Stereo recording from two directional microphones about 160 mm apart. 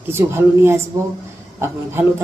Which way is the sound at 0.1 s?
15° right (ahead or behind).